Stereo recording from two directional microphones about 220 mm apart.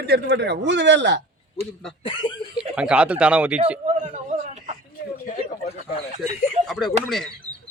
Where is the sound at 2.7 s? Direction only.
5° right (ahead or behind).